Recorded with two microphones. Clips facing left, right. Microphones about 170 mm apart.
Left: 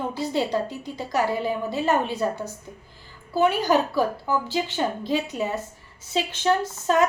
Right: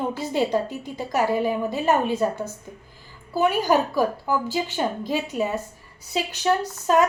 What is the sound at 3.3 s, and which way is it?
A woman's voice, 15° right (ahead or behind).